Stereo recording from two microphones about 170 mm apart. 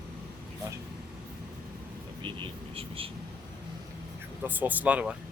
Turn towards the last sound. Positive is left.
turn(degrees=-10)  # may be behind; listen again after turning